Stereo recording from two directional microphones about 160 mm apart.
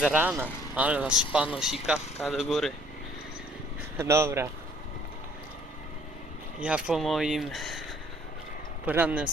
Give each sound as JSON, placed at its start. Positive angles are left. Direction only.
{"t": 0.0, "sound": "speech", "side_deg": -10}
{"t": 3.9, "sound": "speech", "side_deg": -15}
{"t": 6.6, "sound": "speech", "side_deg": -5}
{"t": 8.9, "sound": "speech", "side_deg": -10}